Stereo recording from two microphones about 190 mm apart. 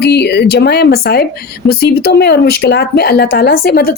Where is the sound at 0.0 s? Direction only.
60° left (ahead or behind).